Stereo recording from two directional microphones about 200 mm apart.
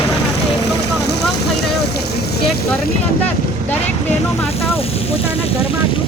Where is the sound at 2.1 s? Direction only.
50° left (ahead or behind).